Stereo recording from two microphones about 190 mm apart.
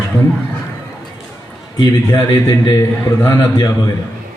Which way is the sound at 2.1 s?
20° left (ahead or behind).